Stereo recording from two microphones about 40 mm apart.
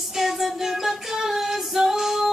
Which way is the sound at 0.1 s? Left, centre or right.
Centre.